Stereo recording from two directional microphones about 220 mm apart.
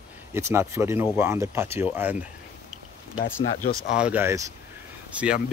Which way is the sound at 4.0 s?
5° right (ahead or behind).